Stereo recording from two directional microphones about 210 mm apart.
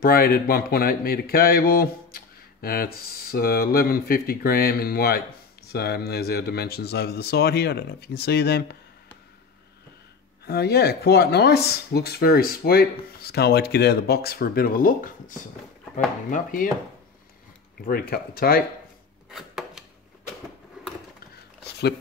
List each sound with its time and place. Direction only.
0.0 s speech: 45° left (ahead or behind)
10.4 s speech: 50° left (ahead or behind)
17.8 s speech: 45° left (ahead or behind)
19.3 s chopping: 5° right (ahead or behind)